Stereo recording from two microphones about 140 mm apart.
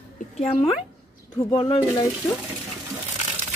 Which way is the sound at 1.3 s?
30° left (ahead or behind).